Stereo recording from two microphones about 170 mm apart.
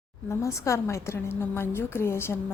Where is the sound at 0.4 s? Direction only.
15° left (ahead or behind).